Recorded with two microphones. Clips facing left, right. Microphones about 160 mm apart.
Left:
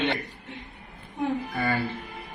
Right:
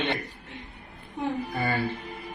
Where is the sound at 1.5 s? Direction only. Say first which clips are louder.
Left 1 dB; 20° right (ahead or behind).